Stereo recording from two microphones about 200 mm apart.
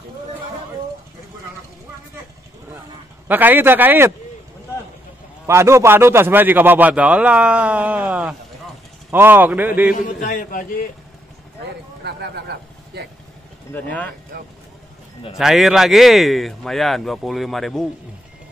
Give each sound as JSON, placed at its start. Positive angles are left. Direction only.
{"t": 3.3, "sound": "a man's voice", "side_deg": -10}
{"t": 5.5, "sound": "a man's voice", "side_deg": -15}
{"t": 10.0, "sound": "a man's voice", "side_deg": 40}
{"t": 12.0, "sound": "speech", "side_deg": -55}
{"t": 13.8, "sound": "speech", "side_deg": 5}
{"t": 15.3, "sound": "speech", "side_deg": 0}